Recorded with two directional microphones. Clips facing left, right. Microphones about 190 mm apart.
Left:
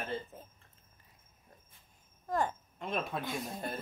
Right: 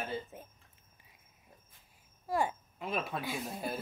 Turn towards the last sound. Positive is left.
turn(degrees=-5)  # may be behind; listen again after turning